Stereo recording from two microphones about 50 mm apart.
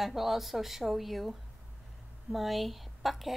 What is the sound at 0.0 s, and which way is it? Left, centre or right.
A woman's voice, centre.